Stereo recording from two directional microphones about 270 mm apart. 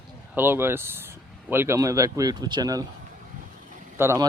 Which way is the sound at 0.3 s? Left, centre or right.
Centre.